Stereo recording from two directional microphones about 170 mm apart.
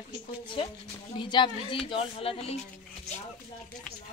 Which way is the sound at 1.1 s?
25° left (ahead or behind).